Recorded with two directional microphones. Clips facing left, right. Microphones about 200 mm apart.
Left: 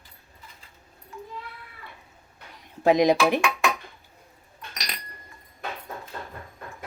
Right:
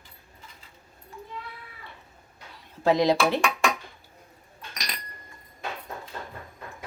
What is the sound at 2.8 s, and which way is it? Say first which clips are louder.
Speech: left 2 dB; 15° left (ahead or behind).